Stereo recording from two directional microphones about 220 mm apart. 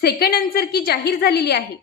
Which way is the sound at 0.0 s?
45° left (ahead or behind).